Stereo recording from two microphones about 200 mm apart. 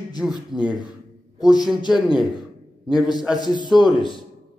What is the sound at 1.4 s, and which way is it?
Speech, 20° left (ahead or behind).